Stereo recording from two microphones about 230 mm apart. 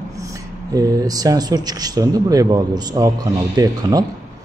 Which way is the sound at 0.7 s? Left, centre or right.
Centre.